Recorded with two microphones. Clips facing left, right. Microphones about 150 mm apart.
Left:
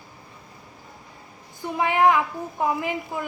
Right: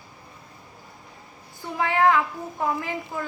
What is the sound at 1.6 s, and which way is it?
A woman's voice, 15° left (ahead or behind).